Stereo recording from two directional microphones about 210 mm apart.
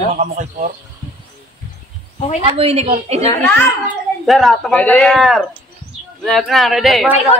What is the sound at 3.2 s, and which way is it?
Speech, 10° left (ahead or behind).